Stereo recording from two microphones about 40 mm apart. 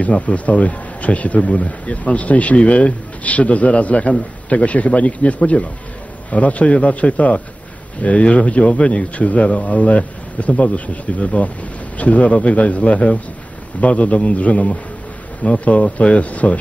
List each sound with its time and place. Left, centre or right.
0.0 s a man's voice: left
9.1 s a man's voice: left